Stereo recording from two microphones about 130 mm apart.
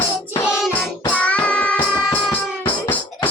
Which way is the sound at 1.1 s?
10° left (ahead or behind).